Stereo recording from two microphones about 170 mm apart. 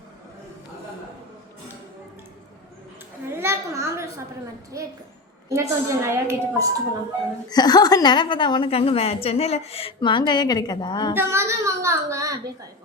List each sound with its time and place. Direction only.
3.3 s a sound: 15° right (ahead or behind)
4.7 s a child's voice: 20° right (ahead or behind)
7.5 s a woman's voice: 25° left (ahead or behind)
11.1 s a child's voice: 15° right (ahead or behind)